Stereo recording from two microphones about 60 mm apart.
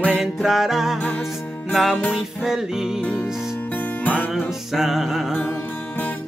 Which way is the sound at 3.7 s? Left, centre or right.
Left.